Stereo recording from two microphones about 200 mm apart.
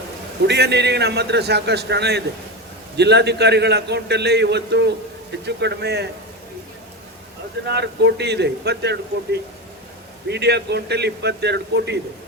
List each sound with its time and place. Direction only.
0.4 s a man's voice: 55° right (ahead or behind)
7.7 s a man's voice: 55° right (ahead or behind)